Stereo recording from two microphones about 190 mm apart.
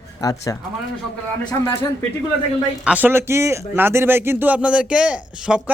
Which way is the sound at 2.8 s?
10° right (ahead or behind).